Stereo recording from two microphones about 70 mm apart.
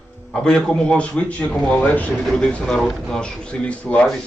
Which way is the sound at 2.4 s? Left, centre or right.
Centre.